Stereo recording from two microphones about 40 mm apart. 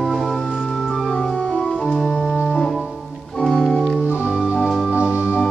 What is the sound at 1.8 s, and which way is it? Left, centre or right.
Organ, centre.